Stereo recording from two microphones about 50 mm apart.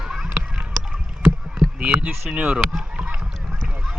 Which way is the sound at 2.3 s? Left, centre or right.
Right.